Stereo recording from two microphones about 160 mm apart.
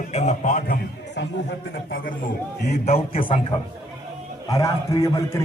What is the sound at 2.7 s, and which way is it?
Speech, 45° left (ahead or behind).